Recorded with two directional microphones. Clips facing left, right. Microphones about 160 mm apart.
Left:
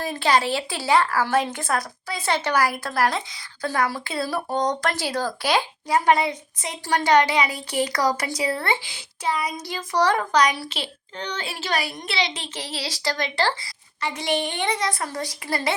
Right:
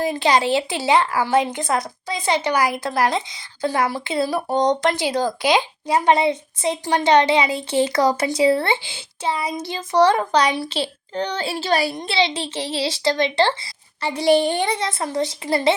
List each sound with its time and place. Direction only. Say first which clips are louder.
0.0 s a woman's voice: right 3 dB; 20° right (ahead or behind)